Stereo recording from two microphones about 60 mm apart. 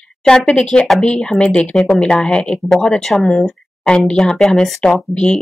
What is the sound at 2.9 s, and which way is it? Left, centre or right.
Speech, centre.